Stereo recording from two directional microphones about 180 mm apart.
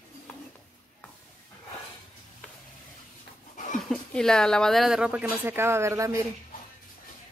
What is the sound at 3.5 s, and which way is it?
Dog, 45° left (ahead or behind).